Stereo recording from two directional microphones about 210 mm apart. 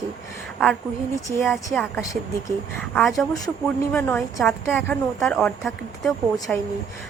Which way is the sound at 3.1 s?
15° left (ahead or behind).